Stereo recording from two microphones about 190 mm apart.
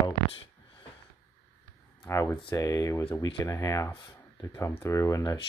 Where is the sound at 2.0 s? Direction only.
15° left (ahead or behind).